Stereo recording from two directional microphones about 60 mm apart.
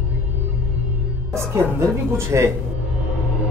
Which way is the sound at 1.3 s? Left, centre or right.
Right.